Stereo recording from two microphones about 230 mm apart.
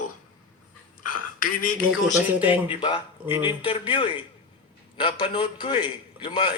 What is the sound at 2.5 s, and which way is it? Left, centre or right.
A man's voice, left.